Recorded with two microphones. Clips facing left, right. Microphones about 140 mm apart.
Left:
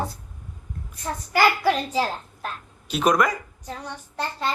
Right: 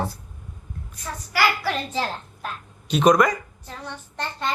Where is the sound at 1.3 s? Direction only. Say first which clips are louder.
Left 4 dB; 20° left (ahead or behind).